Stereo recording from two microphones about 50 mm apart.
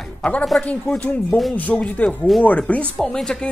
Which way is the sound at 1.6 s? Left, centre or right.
Left.